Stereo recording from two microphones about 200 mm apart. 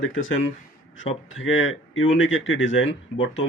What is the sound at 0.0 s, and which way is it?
Speech, 75° left (ahead or behind).